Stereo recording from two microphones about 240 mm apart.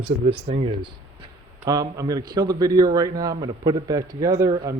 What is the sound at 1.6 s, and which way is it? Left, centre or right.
A man's voice, centre.